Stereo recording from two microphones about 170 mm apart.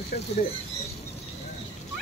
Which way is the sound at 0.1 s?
65° left (ahead or behind).